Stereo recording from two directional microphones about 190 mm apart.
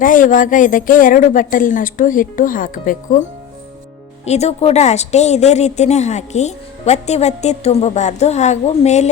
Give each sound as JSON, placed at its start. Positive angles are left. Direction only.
{"t": 0.0, "sound": "speech", "side_deg": 45}
{"t": 4.3, "sound": "a woman's voice", "side_deg": 35}